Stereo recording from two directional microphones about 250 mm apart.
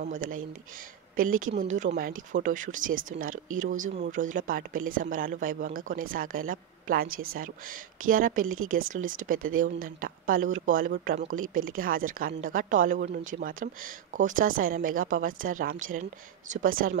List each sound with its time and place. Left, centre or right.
0.0 s speech: right